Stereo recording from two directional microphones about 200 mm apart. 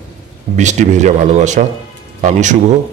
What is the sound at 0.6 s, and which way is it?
Speech, 35° right (ahead or behind).